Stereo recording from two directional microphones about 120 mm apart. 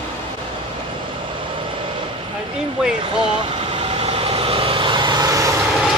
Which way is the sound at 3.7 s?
55° right (ahead or behind).